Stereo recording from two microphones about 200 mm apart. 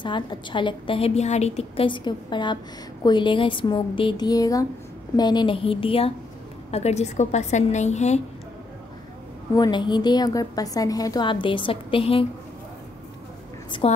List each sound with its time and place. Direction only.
0.0 s a woman's voice: 25° left (ahead or behind)
9.6 s a woman's voice: 20° left (ahead or behind)
13.7 s a woman's voice: 25° left (ahead or behind)